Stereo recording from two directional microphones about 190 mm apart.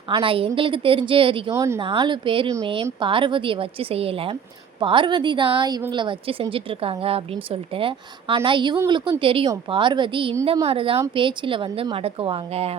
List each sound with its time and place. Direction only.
0.1 s a woman's voice: 30° right (ahead or behind)
1.5 s speech: 15° right (ahead or behind)
1.8 s a woman's voice: 25° right (ahead or behind)